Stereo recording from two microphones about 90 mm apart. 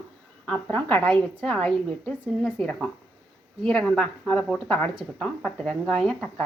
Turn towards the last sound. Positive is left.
turn(degrees=15)  # may be behind; listen again after turning